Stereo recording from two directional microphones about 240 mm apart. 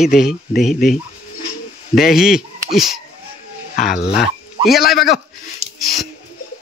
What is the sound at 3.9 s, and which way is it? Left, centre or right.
Speech, left.